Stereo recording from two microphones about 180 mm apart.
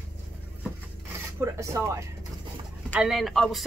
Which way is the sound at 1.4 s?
15° right (ahead or behind).